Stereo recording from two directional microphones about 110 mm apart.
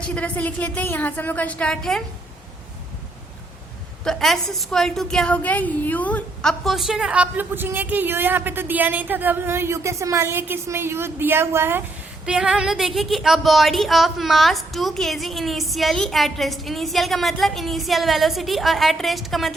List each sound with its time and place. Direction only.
0.1 s a woman's voice: 15° left (ahead or behind)
4.0 s a woman's voice: 5° left (ahead or behind)
6.4 s a woman's voice: centre (ahead or behind); by 11.8 s 20° right (ahead or behind)
12.2 s a woman's voice: 5° right (ahead or behind)